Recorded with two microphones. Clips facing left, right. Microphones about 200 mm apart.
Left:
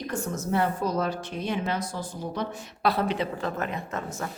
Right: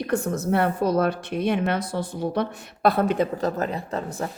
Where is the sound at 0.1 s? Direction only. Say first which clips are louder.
Right 5 dB; 60° right (ahead or behind).